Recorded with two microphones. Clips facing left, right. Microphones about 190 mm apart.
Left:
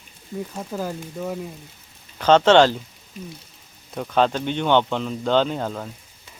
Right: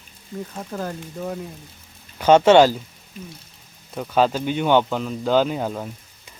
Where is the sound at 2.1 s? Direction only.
10° right (ahead or behind).